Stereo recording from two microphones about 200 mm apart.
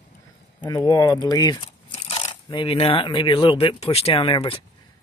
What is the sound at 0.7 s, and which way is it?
Speech, 20° left (ahead or behind).